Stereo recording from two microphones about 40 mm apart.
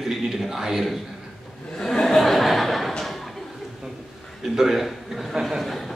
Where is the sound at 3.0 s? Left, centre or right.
Centre.